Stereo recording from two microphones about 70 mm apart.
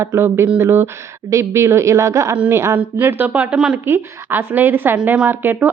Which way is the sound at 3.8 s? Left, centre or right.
Right.